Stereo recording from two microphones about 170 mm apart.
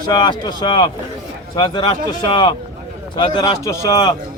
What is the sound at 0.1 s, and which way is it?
Speech, 25° left (ahead or behind).